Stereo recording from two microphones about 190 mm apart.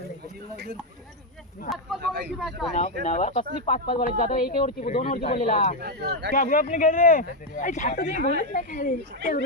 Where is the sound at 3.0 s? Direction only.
35° left (ahead or behind).